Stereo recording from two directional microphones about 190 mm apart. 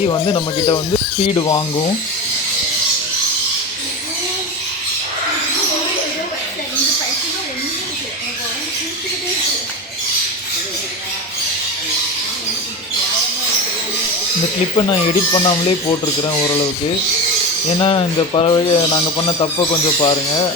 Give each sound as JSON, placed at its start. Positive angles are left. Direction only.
{"t": 0.1, "sound": "speech", "side_deg": 25}
{"t": 14.8, "sound": "speech", "side_deg": 20}
{"t": 17.7, "sound": "speech", "side_deg": 25}